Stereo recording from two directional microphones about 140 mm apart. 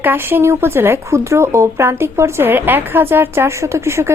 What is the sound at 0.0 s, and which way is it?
Speech, 15° right (ahead or behind).